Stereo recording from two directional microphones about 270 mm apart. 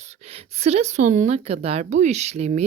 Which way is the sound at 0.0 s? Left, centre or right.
Right.